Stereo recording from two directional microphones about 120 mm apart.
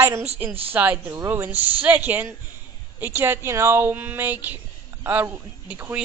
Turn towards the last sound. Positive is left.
turn(degrees=-15)  # may be behind; listen again after turning